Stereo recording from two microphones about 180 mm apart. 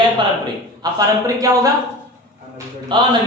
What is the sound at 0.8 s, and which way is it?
Speech, 20° right (ahead or behind).